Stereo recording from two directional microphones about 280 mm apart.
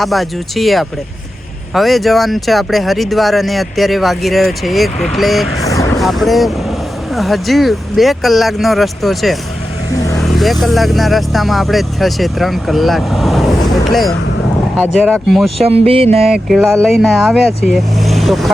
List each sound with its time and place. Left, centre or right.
0.0 s speech: centre
5.6 s vehicle: centre
6.0 s speech: centre
15.5 s a sound: right
16.2 s speech: centre